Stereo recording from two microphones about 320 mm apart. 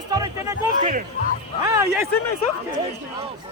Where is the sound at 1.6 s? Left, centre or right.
Centre.